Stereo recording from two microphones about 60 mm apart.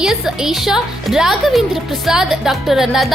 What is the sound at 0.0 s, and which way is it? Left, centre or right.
A woman's voice, centre.